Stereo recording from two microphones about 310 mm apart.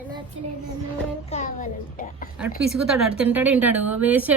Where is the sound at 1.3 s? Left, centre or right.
Left.